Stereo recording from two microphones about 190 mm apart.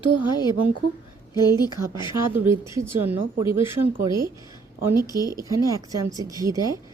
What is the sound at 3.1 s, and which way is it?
Speech, 10° right (ahead or behind).